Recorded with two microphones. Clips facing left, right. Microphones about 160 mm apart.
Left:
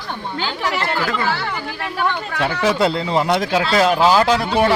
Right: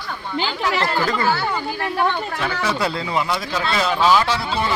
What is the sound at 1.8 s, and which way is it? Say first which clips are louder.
Speech: right 1 dB; 25° right (ahead or behind).